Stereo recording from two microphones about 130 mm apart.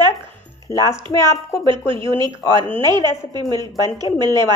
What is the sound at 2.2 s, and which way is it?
Speech, 35° right (ahead or behind).